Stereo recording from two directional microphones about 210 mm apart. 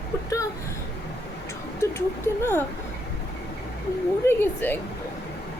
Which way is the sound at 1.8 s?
10° left (ahead or behind).